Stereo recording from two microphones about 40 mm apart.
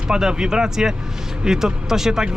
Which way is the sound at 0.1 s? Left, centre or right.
Centre.